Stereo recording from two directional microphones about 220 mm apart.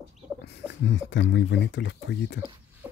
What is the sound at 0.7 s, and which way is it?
Speech, 55° left (ahead or behind).